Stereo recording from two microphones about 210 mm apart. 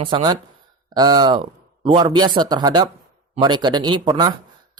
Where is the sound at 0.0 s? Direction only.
20° right (ahead or behind).